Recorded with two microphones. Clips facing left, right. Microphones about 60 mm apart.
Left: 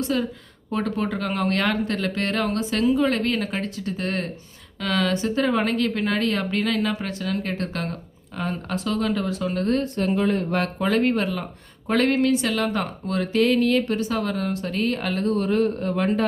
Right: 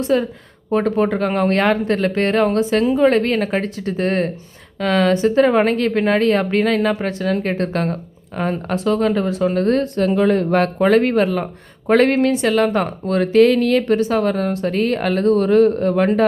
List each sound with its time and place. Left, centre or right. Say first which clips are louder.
0.0 s speech: right 7 dB; right
9.9 s speech: right 6 dB; right